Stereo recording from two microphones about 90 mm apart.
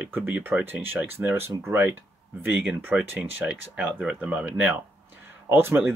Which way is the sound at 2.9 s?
15° right (ahead or behind).